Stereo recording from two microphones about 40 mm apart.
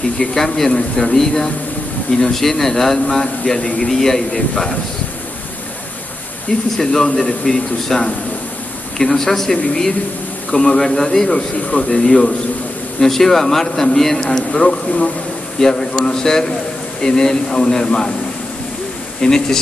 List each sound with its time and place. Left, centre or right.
0.2 s speech: centre
6.8 s speech: centre
11.2 s speech: left
11.9 s speech: centre
14.2 s speech: centre
19.2 s speech: centre